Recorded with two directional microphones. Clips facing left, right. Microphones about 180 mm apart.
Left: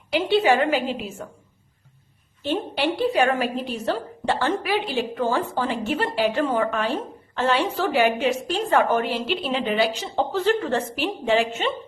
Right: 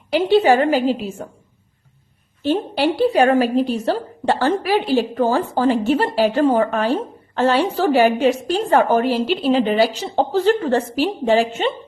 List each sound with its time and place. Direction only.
0.1 s speech: 40° right (ahead or behind)
2.5 s speech: 35° right (ahead or behind)